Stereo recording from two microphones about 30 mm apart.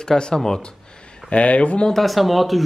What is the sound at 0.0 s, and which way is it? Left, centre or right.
Speech, left.